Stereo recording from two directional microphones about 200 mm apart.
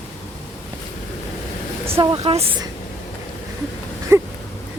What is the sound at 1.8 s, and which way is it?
Speech, 15° right (ahead or behind).